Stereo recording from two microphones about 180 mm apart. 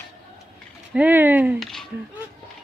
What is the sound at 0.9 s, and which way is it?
Speech, 10° right (ahead or behind).